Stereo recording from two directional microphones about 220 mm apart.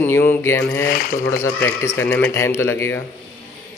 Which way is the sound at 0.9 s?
45° left (ahead or behind).